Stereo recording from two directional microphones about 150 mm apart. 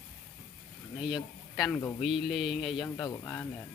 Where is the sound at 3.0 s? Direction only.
15° left (ahead or behind).